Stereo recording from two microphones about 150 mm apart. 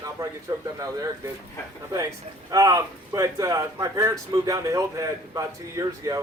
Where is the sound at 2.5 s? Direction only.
20° right (ahead or behind).